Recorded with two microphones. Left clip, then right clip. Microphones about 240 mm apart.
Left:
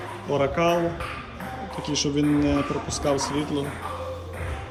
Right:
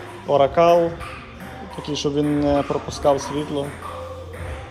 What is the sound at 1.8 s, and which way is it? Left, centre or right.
A man's voice, centre.